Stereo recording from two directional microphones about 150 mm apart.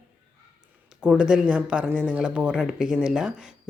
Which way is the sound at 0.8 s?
5° right (ahead or behind).